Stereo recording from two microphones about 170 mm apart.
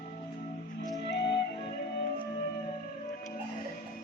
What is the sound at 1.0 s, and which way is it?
Music, 90° left.